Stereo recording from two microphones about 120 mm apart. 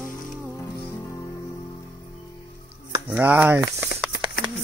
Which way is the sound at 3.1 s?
15° right (ahead or behind).